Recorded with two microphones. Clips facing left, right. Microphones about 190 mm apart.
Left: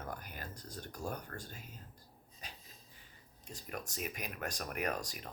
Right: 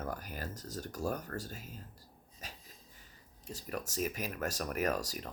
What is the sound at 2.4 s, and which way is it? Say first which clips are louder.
Wheeze: right 2 dB; 45° right (ahead or behind).